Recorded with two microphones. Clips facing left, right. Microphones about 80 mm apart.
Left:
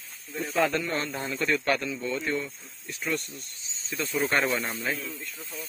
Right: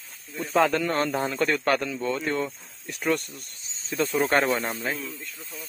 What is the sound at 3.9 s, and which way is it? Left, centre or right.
Speech, right.